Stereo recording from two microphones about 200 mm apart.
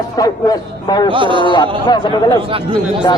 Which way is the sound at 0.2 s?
20° left (ahead or behind).